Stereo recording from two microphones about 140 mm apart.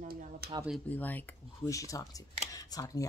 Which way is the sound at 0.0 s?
80° right.